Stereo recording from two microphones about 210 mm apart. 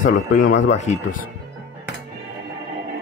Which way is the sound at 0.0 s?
45° left (ahead or behind).